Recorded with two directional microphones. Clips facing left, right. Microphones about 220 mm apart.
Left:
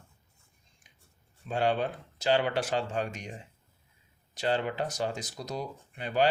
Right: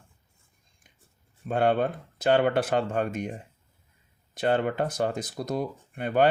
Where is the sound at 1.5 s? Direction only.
55° right (ahead or behind).